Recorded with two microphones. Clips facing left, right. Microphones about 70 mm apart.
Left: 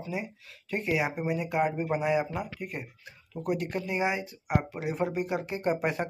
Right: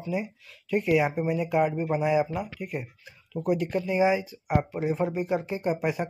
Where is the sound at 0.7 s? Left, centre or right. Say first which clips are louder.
Right 6 dB; left.